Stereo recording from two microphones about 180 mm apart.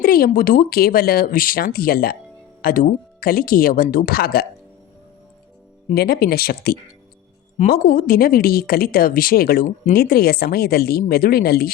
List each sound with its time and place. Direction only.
0.0 s a woman's voice: 55° left (ahead or behind)
5.9 s a woman's voice: 60° left (ahead or behind)